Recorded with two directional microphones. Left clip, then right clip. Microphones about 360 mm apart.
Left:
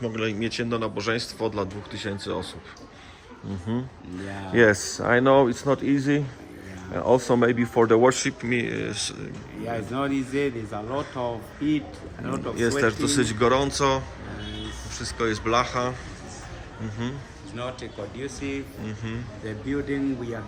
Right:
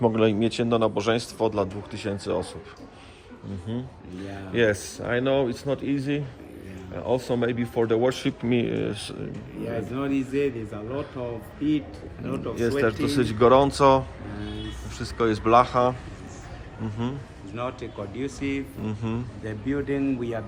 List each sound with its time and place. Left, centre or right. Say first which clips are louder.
0.0 s a man's voice: right 6 dB; centre
3.7 s a man's voice: left 4 dB; centre
12.2 s a man's voice: left 1 dB; centre
17.5 s speech: right 2 dB; right
18.9 s a man's voice: right 3 dB; centre
19.5 s speech: right 1 dB; right